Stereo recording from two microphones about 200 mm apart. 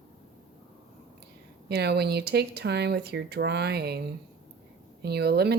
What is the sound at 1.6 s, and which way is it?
Speech, 55° right (ahead or behind).